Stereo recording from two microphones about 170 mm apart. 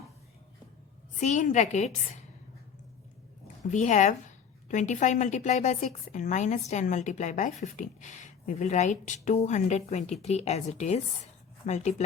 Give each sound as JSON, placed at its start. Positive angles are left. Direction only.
{"t": 1.2, "sound": "a woman's voice", "side_deg": 45}
{"t": 3.7, "sound": "a woman's voice", "side_deg": 45}